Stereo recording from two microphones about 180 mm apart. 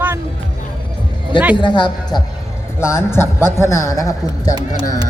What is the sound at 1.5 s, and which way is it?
Speech, 25° left (ahead or behind).